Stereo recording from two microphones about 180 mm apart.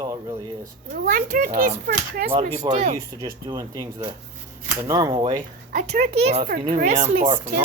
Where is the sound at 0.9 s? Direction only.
50° right (ahead or behind).